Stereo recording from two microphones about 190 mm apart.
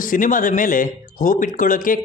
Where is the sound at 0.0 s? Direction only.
45° left (ahead or behind).